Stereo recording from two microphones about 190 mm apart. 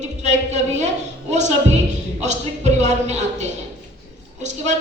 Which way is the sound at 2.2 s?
35° right (ahead or behind).